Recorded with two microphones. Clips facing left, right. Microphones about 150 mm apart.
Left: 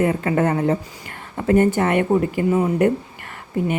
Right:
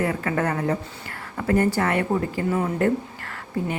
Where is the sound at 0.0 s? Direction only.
25° left (ahead or behind).